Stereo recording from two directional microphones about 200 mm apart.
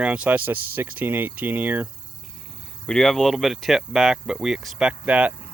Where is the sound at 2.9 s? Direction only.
5° left (ahead or behind).